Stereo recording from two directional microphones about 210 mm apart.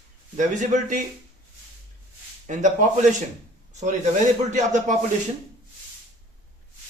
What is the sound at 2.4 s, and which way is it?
Speech, 35° right (ahead or behind).